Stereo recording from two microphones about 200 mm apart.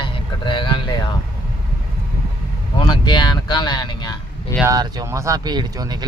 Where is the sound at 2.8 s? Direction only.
20° left (ahead or behind).